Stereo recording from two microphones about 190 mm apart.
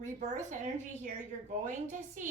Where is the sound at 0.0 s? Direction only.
40° right (ahead or behind).